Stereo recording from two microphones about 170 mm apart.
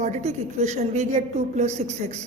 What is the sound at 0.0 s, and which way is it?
A woman's voice, 45° right (ahead or behind).